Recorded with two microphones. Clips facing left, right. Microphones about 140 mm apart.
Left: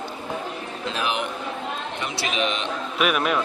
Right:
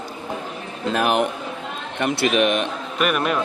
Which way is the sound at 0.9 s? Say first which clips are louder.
Right 8 dB; 50° right (ahead or behind).